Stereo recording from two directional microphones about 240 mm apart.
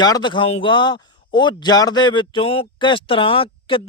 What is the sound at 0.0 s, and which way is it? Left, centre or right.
Speech, centre.